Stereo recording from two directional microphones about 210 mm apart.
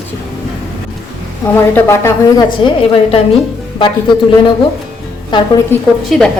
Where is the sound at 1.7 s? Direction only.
10° left (ahead or behind).